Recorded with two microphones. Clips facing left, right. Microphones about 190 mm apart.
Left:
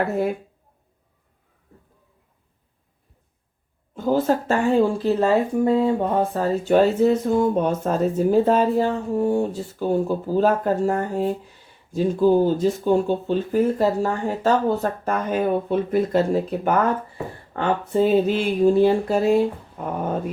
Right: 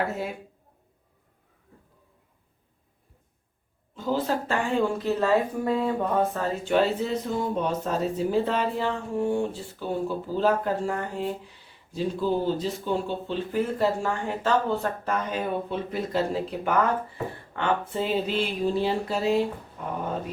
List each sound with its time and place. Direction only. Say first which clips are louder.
3.9 s speech: left 6 dB; 50° left (ahead or behind)